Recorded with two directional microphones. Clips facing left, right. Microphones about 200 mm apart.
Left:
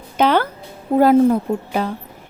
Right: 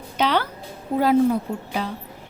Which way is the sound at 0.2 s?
50° left (ahead or behind).